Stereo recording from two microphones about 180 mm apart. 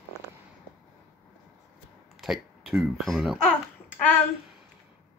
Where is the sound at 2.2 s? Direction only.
Centre (ahead or behind).